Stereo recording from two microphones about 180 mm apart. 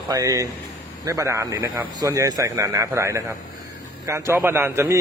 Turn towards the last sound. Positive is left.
turn(degrees=-15)  # may be behind; listen again after turning